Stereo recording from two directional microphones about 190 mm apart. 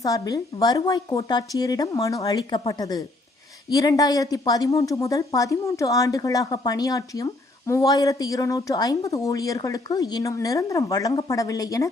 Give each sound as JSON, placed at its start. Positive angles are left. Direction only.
{"t": 0.0, "sound": "a woman's voice", "side_deg": 20}